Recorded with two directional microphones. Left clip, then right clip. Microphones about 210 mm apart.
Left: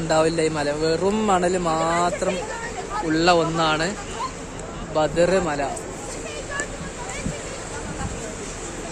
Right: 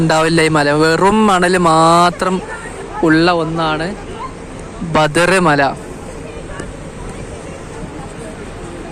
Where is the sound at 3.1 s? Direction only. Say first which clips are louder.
Right 6 dB; 20° right (ahead or behind).